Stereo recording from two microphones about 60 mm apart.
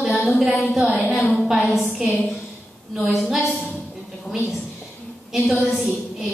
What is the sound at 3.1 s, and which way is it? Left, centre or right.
Speech, centre.